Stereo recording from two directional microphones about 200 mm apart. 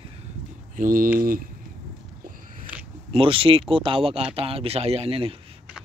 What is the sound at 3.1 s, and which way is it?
Speech, 25° right (ahead or behind).